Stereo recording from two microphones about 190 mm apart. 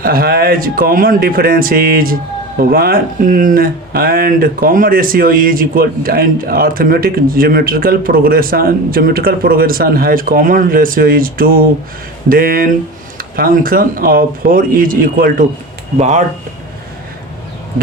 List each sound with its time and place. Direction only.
0.0 s speech: 50° right (ahead or behind)
16.0 s speech: 35° right (ahead or behind)